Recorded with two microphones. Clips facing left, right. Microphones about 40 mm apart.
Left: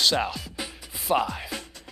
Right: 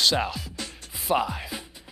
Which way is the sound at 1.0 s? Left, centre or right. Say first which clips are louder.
Even; centre.